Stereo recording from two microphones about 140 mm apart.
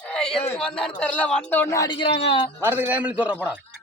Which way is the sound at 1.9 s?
35° left (ahead or behind).